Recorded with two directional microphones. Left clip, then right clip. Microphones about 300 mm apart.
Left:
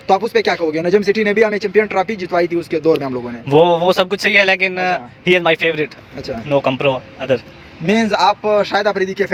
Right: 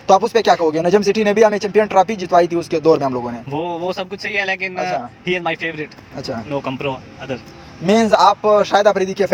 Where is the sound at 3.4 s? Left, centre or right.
Left.